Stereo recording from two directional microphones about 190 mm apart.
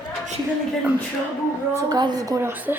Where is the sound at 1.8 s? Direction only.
20° right (ahead or behind).